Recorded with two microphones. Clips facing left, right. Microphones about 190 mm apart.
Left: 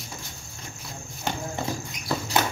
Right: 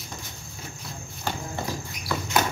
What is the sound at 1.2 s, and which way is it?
Horse, 20° left (ahead or behind).